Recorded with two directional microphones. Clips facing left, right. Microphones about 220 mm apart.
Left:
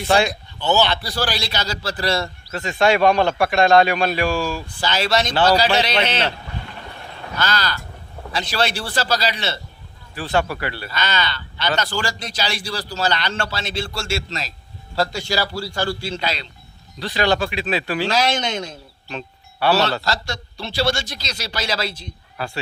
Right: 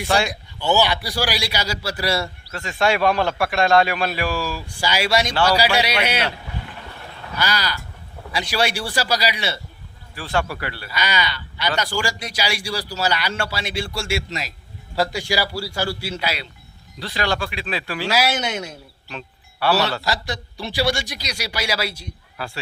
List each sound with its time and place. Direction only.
0.3 s a man's voice: 10° right (ahead or behind)
7.3 s a man's voice: 10° right (ahead or behind)
10.2 s speech: 20° left (ahead or behind)
10.9 s a man's voice: 10° right (ahead or behind)
17.1 s speech: 20° left (ahead or behind)
18.1 s a man's voice: 10° right (ahead or behind)
19.1 s music: 25° left (ahead or behind)
20.0 s a man's voice: 15° right (ahead or behind)